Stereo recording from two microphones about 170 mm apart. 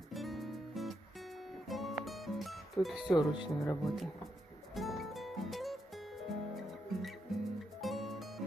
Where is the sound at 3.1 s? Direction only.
25° left (ahead or behind).